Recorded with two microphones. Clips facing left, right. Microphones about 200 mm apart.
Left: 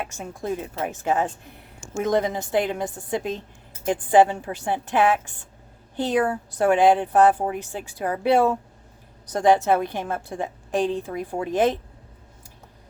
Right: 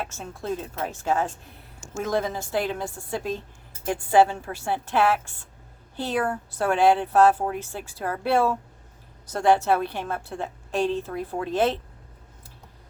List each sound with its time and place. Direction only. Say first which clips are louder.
0.1 s a woman's voice: left 2 dB; 15° left (ahead or behind)